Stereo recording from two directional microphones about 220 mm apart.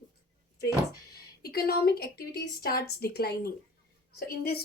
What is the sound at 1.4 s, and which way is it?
A woman's voice, 45° left (ahead or behind).